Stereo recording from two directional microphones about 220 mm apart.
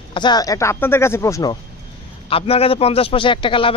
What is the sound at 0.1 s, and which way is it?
A man's voice, 20° left (ahead or behind).